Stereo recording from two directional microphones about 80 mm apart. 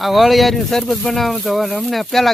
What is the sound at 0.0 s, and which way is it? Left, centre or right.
Speech, centre.